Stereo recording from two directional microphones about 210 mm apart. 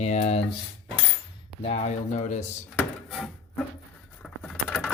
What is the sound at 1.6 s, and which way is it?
Speech, 30° left (ahead or behind).